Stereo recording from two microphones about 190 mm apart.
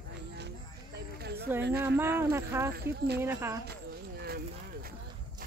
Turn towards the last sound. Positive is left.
turn(degrees=-55)  # may be behind; listen again after turning